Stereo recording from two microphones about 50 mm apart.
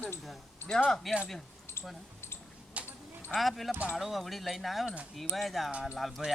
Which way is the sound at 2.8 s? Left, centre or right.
Right.